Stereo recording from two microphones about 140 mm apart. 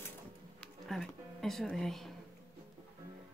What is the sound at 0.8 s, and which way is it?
Music, centre (ahead or behind).